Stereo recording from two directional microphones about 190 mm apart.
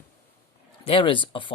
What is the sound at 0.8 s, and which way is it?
Speech, 25° left (ahead or behind).